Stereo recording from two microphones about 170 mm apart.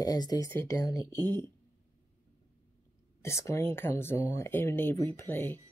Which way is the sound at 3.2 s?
15° left (ahead or behind).